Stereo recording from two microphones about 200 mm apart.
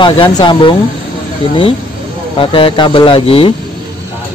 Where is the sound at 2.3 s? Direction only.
25° left (ahead or behind).